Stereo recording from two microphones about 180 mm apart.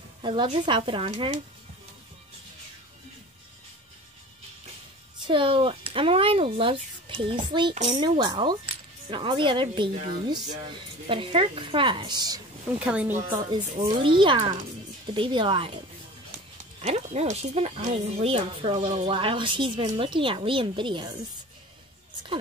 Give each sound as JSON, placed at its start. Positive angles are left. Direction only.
{"t": 0.2, "sound": "speech", "side_deg": -30}
{"t": 5.2, "sound": "speech", "side_deg": -30}
{"t": 12.7, "sound": "speech", "side_deg": -10}
{"t": 13.3, "sound": "speech", "side_deg": -25}
{"t": 16.8, "sound": "speech", "side_deg": -35}